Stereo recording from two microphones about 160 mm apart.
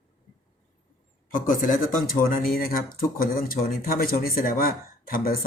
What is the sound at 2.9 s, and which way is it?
Speech, 65° left (ahead or behind).